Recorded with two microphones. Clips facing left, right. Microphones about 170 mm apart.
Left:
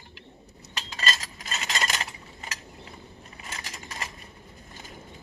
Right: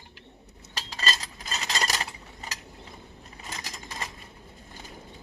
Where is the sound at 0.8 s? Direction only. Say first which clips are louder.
Even; 35° right (ahead or behind).